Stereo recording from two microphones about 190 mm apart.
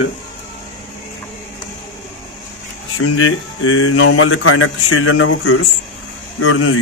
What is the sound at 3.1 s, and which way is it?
Speech, 90° left.